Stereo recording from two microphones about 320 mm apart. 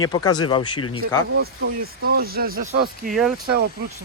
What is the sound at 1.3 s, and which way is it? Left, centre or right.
Speech, right.